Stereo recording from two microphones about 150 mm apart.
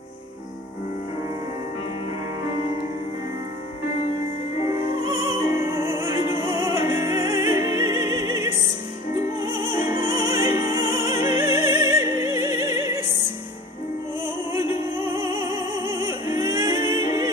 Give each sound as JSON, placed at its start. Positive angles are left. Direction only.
{"t": 4.6, "sound": "music", "side_deg": -20}
{"t": 14.2, "sound": "opera", "side_deg": -20}